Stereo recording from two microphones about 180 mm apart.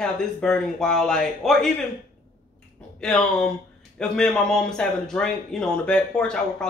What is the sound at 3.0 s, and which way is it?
A man's voice, 5° left (ahead or behind).